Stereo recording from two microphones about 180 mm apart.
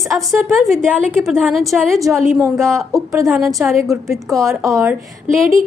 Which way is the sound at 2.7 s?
15° right (ahead or behind).